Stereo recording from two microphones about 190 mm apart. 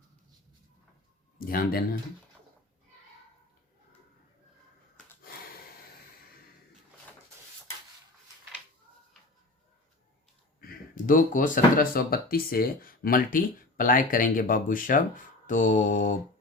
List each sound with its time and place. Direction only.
1.4 s speech: 50° left (ahead or behind)
10.6 s speech: 45° left (ahead or behind)